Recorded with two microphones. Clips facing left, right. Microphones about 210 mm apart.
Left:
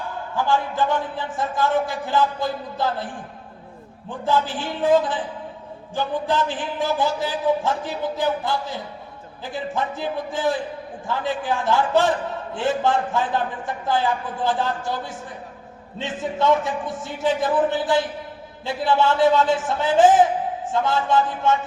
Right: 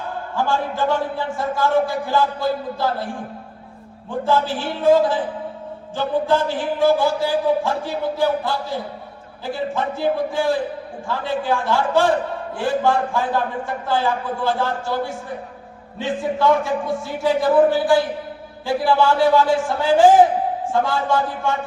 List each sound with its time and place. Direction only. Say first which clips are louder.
0.4 s a woman's voice: right 1 dB; 20° left (ahead or behind)
4.3 s a woman's voice: right 2 dB; 15° left (ahead or behind)